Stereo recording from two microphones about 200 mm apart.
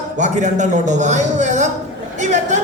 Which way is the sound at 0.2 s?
35° right (ahead or behind).